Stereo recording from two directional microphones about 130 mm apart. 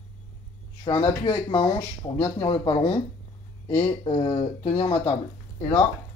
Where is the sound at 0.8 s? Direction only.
40° left (ahead or behind).